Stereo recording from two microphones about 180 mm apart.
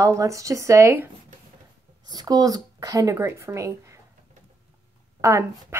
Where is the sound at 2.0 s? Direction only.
20° right (ahead or behind).